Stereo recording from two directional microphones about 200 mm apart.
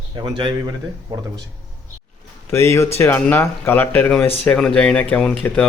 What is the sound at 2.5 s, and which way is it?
Speech, 15° left (ahead or behind).